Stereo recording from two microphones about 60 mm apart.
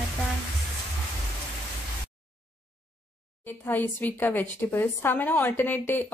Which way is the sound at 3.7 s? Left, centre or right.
Left.